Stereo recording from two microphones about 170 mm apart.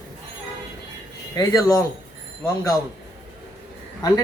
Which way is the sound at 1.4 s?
20° left (ahead or behind).